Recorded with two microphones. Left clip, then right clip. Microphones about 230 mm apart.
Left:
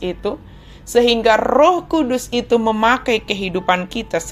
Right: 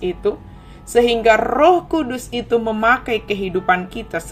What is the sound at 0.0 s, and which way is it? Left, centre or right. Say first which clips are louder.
A woman's voice: right 2 dB; centre.